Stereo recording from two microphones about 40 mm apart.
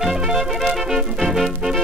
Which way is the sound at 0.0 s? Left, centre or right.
Centre.